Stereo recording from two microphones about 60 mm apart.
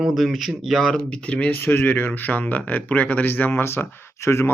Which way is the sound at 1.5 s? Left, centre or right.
Left.